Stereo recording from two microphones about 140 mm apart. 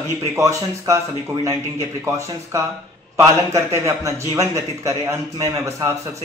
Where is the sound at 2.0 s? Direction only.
20° right (ahead or behind).